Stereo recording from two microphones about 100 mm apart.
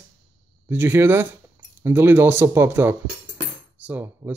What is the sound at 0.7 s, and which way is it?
Speech, 25° right (ahead or behind).